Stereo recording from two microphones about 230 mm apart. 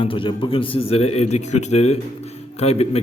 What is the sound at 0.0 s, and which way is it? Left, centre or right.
A man's voice, left.